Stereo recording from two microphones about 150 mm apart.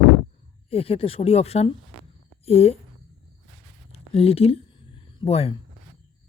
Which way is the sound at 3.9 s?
40° left (ahead or behind).